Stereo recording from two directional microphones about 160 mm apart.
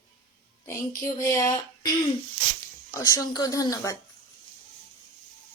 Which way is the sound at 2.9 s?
20° left (ahead or behind).